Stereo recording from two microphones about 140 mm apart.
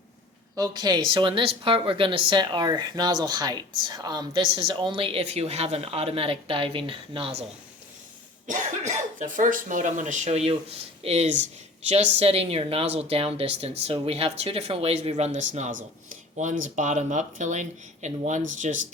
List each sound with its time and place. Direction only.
0.5 s speech: 30° right (ahead or behind); by 7.4 s 45° right (ahead or behind)
8.4 s speech: 60° right (ahead or behind)